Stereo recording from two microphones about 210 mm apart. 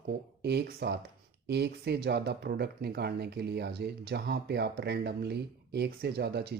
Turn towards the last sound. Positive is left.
turn(degrees=-50)  # may be behind; listen again after turning